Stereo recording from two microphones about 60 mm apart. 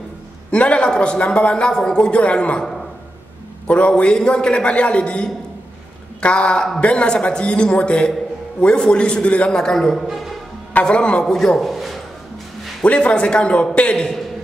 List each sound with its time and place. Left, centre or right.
0.5 s a man's voice: centre
3.6 s a man's voice: centre
10.7 s a man's voice: centre
11.3 s a man's voice: centre
12.8 s a man's voice: left